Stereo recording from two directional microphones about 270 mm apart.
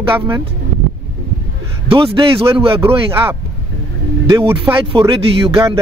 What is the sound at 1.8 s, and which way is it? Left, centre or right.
A man's voice, centre.